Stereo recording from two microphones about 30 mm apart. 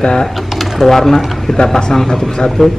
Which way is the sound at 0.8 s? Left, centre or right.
Centre.